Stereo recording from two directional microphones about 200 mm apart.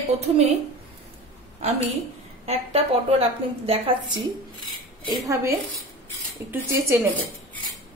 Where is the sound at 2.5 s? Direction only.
30° right (ahead or behind).